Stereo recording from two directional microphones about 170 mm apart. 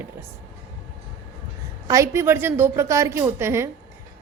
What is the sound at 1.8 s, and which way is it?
Speech, 20° right (ahead or behind).